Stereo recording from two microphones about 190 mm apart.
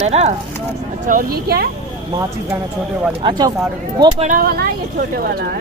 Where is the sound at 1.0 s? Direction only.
50° right (ahead or behind).